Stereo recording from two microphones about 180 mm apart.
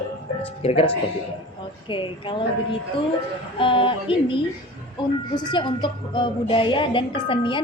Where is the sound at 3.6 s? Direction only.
30° left (ahead or behind).